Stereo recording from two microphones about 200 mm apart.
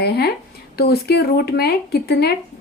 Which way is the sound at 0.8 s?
50° left (ahead or behind).